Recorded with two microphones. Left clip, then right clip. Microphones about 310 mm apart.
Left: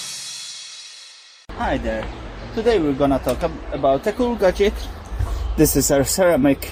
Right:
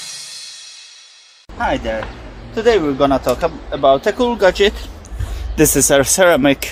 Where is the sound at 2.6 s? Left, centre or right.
Right.